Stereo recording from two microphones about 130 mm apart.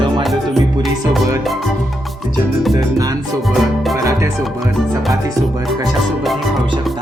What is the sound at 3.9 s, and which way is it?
Music, 25° right (ahead or behind).